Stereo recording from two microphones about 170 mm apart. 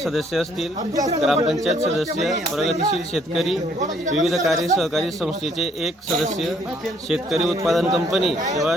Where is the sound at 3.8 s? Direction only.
45° right (ahead or behind).